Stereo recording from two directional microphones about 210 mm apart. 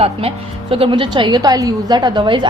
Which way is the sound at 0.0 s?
30° right (ahead or behind).